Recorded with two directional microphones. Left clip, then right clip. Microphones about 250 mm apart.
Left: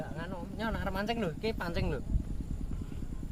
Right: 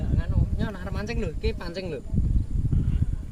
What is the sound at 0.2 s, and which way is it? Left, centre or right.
Speech, left.